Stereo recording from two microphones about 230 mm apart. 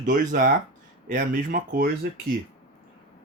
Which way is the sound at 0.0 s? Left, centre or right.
Right.